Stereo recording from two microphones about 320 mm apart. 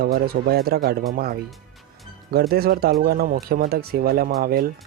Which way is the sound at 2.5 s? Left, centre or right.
Right.